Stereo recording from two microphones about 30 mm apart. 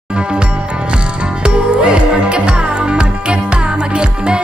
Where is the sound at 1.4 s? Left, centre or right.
Right.